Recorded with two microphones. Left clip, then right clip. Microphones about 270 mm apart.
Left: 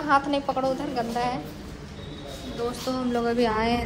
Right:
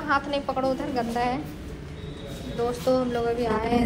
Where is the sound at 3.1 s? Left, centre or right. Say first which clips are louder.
Left 1 dB; left.